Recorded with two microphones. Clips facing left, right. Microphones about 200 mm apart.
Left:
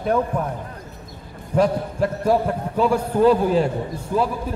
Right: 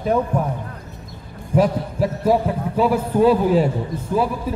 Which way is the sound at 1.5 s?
5° right (ahead or behind).